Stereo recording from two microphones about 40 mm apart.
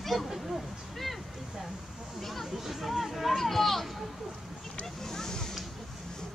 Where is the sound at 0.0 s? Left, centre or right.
Centre.